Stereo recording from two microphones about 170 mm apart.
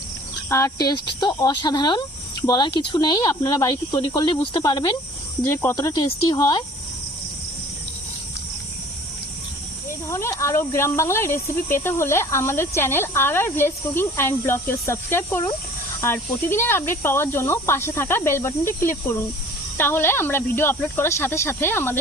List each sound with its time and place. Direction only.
0.5 s speech: 20° left (ahead or behind)
10.1 s speech: 15° left (ahead or behind)